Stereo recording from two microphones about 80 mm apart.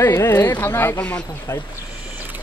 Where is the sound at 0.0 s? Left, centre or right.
Left.